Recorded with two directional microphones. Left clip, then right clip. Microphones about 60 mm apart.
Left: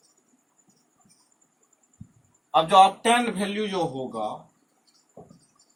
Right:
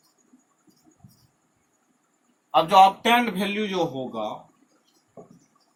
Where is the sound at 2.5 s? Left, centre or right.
Left.